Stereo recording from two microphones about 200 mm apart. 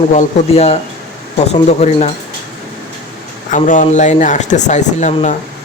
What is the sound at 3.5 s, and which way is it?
Speech, 40° left (ahead or behind).